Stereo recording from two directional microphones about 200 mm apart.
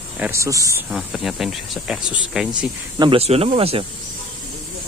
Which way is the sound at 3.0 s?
30° right (ahead or behind).